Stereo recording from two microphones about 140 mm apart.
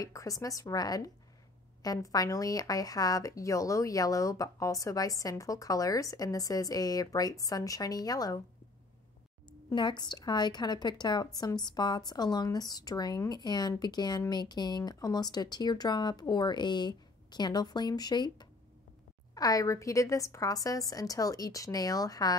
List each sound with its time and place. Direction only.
0.0 s a woman's voice: 25° left (ahead or behind)
9.5 s a woman's voice: 35° left (ahead or behind)